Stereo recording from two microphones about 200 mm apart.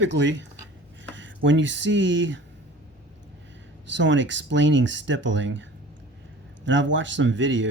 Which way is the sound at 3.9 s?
65° right (ahead or behind).